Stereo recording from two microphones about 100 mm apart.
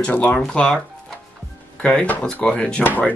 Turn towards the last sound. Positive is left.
turn(degrees=15)  # may be behind; listen again after turning